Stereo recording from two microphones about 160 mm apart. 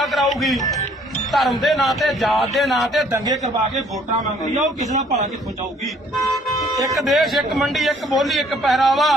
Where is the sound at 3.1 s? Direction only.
25° right (ahead or behind).